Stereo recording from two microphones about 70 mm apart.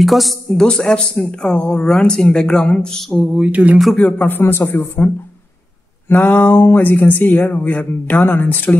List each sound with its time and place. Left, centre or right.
0.0 s a man's voice: centre
3.3 s speech: centre
4.0 s speech: left
4.4 s a man's voice: left